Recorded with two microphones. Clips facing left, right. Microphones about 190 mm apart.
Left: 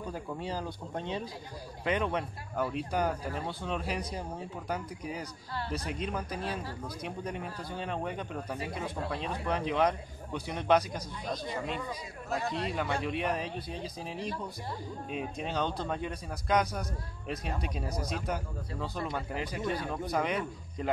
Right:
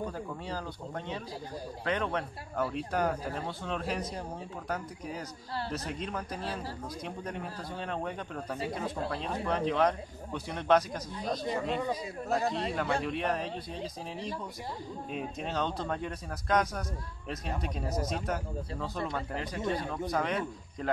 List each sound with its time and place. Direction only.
0.4 s speech: 15° left (ahead or behind)
1.9 s speech: 10° left (ahead or behind)
5.7 s speech: 5° left (ahead or behind)
11.2 s a man's voice: 35° right (ahead or behind)
12.7 s speech: centre (ahead or behind)
15.0 s speech: centre (ahead or behind)